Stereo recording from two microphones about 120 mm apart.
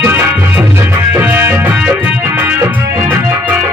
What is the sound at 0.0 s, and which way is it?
Music, 20° right (ahead or behind).